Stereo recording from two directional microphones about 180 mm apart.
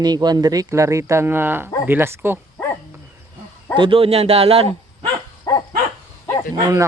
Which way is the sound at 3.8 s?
30° right (ahead or behind).